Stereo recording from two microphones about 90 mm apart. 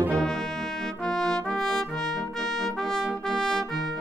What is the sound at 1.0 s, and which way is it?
Trumpet, 5° left (ahead or behind).